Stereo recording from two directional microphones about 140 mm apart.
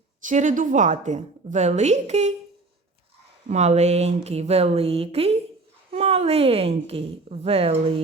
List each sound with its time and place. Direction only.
0.3 s a woman's voice: 65° right (ahead or behind)
3.5 s a woman's voice: 50° right (ahead or behind)